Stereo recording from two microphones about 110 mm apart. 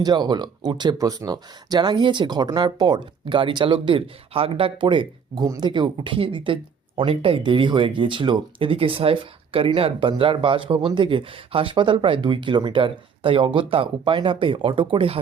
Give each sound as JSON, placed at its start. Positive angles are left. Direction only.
{"t": 0.0, "sound": "speech", "side_deg": -40}
{"t": 0.9, "sound": "speech", "side_deg": -30}